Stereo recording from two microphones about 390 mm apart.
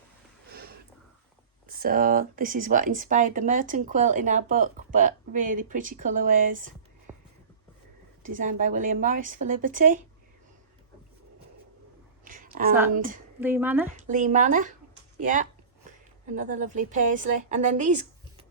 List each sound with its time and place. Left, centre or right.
0.5 s a sound: right
1.6 s speech: right
7.1 s whispering: centre
8.2 s speech: centre
12.2 s a sound: right
13.4 s speech: centre
13.9 s a woman's voice: centre